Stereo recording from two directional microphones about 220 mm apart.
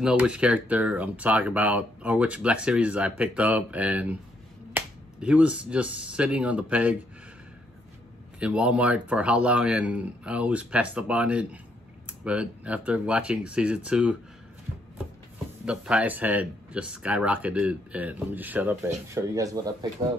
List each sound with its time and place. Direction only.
0.0 s speech: 5° right (ahead or behind)
8.4 s speech: 5° right (ahead or behind)
15.6 s speech: 5° right (ahead or behind)